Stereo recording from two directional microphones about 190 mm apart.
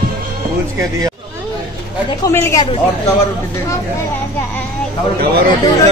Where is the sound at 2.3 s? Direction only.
10° left (ahead or behind).